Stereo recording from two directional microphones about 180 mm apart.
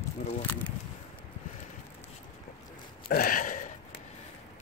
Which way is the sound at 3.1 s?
55° left (ahead or behind).